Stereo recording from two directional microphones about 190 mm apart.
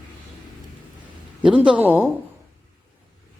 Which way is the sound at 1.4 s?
5° right (ahead or behind).